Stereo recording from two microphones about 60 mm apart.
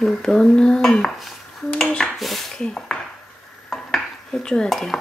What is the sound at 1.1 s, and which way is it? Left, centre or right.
Dishes, centre.